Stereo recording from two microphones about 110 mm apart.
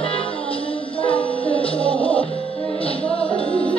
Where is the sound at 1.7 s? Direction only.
10° left (ahead or behind).